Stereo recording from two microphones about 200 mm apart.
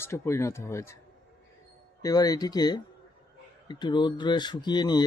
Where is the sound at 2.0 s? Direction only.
20° left (ahead or behind).